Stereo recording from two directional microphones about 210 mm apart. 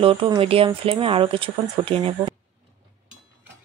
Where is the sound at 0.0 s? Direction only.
25° right (ahead or behind).